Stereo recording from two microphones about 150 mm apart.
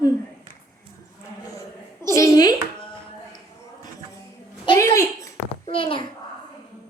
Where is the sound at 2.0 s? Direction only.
20° left (ahead or behind).